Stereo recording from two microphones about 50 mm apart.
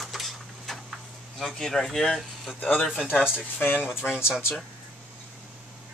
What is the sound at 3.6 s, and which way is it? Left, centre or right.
Speech, left.